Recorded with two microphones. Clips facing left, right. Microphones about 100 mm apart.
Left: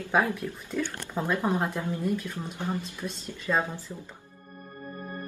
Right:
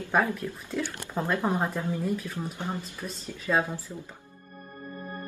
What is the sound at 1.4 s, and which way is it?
Speech, 15° right (ahead or behind).